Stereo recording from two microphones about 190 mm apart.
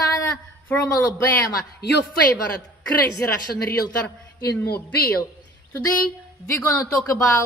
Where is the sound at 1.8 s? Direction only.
60° left (ahead or behind).